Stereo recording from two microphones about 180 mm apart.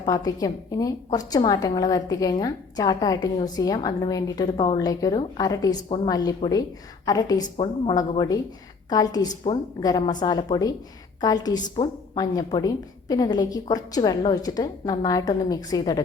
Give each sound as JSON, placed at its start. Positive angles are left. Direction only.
{"t": 0.0, "sound": "a woman's voice", "side_deg": 20}